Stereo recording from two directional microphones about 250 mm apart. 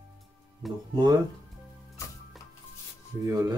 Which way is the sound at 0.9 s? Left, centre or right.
Centre.